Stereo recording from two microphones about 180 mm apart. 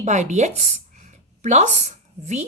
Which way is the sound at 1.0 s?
40° right (ahead or behind).